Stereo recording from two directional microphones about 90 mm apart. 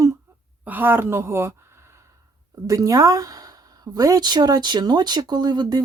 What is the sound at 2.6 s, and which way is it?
A woman's voice, 40° right (ahead or behind).